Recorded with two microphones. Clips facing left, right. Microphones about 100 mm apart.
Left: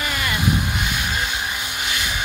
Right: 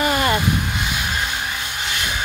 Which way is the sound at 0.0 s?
40° right (ahead or behind).